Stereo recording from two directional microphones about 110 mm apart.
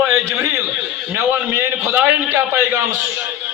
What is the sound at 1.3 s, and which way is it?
A man's voice, 20° right (ahead or behind).